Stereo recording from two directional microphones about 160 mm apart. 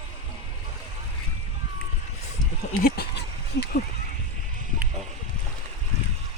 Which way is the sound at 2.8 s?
85° left.